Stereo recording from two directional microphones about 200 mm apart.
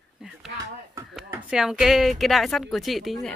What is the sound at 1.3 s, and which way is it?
Speech, 5° right (ahead or behind).